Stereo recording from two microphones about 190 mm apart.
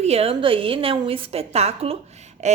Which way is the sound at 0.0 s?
30° right (ahead or behind).